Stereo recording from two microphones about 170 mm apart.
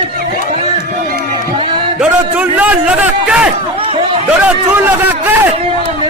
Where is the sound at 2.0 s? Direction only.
10° right (ahead or behind).